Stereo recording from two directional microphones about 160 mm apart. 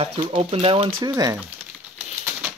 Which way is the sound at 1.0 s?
20° right (ahead or behind).